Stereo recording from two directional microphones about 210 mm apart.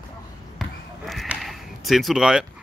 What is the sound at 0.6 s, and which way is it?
Basketball bounce, centre (ahead or behind).